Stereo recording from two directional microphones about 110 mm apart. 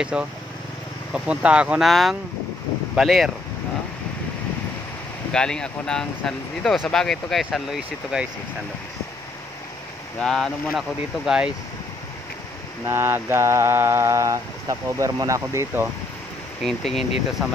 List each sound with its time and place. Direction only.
0.0 s speech: 10° right (ahead or behind)
1.9 s speech: centre (ahead or behind)
5.3 s speech: 5° left (ahead or behind)
10.2 s speech: 5° left (ahead or behind)
12.8 s mantra: 20° right (ahead or behind)
16.6 s speech: centre (ahead or behind)